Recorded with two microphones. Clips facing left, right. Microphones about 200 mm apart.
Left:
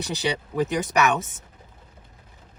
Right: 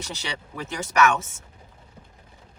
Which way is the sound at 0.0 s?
15° left (ahead or behind).